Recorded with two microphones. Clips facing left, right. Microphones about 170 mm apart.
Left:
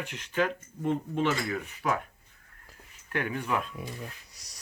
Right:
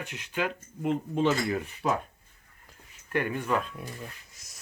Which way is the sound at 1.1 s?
20° right (ahead or behind).